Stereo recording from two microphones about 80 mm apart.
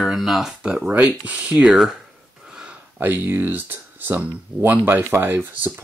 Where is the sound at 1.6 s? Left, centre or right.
Centre.